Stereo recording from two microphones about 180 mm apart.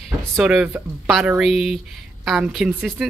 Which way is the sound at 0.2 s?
5° right (ahead or behind).